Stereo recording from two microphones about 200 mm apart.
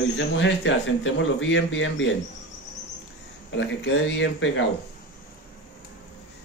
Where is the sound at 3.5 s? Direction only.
65° left (ahead or behind).